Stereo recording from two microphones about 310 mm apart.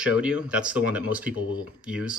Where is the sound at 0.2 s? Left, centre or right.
Centre.